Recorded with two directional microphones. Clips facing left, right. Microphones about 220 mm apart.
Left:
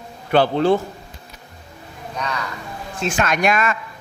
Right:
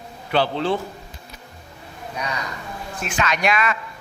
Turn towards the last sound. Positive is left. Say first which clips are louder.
# left 2 dB
turn(degrees=45)  # may be behind; listen again after turning